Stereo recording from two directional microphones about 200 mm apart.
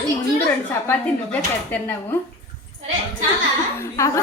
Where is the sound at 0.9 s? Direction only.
10° left (ahead or behind).